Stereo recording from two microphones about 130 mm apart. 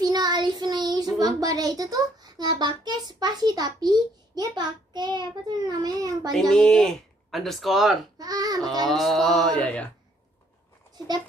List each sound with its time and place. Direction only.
0.0 s child singing: 30° right (ahead or behind)
1.2 s a child's voice: 25° right (ahead or behind)
6.5 s speech: 5° left (ahead or behind)
8.2 s a child's voice: 30° right (ahead or behind)
8.8 s speech: centre (ahead or behind)